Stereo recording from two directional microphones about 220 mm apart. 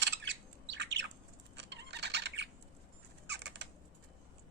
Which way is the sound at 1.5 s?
50° right (ahead or behind).